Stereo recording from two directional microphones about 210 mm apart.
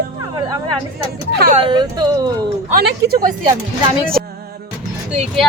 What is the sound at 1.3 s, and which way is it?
Speech, 45° right (ahead or behind).